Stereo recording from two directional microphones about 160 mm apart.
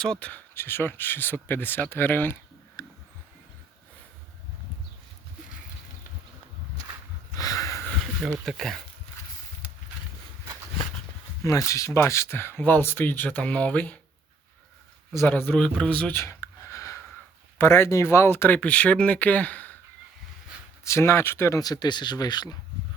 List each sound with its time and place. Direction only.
0.0 s speech: 5° left (ahead or behind)
7.3 s a sound: 20° left (ahead or behind)
8.4 s speech: centre (ahead or behind)
11.4 s speech: 20° left (ahead or behind)
15.2 s speech: 10° left (ahead or behind)
20.8 s speech: 15° left (ahead or behind)